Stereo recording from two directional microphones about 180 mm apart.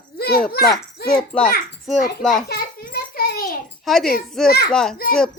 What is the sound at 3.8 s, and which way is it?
A child's voice, centre (ahead or behind).